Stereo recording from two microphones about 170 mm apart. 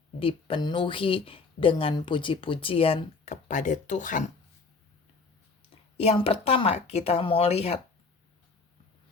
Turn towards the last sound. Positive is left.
turn(degrees=40)  # may be behind; listen again after turning